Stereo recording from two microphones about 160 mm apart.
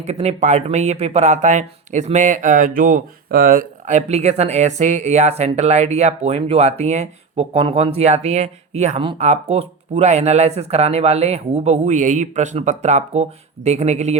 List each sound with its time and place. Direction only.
0.0 s speech: 40° right (ahead or behind)